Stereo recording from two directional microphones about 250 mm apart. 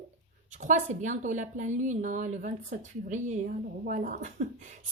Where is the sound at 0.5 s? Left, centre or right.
Right.